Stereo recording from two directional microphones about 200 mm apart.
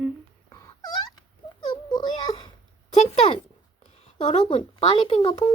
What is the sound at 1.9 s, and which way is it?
Wail, 20° left (ahead or behind).